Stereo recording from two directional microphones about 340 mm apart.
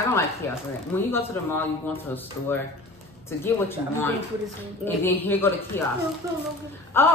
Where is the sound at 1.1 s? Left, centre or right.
Centre.